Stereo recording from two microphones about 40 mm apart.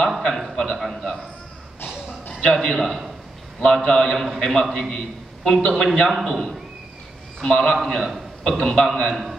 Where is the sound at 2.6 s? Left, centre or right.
Centre.